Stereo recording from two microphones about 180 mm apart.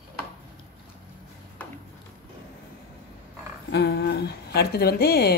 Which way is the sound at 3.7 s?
65° left (ahead or behind).